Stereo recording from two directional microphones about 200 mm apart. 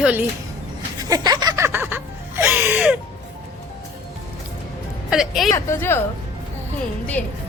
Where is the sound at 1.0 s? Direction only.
20° right (ahead or behind).